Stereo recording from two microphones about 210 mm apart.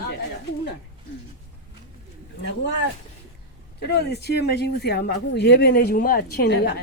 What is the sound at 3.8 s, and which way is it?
Speech, 50° left (ahead or behind).